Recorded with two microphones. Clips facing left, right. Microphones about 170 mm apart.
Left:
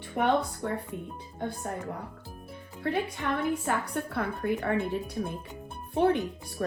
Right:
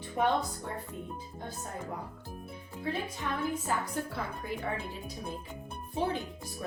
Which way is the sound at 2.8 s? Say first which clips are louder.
Left 5 dB; 65° left (ahead or behind).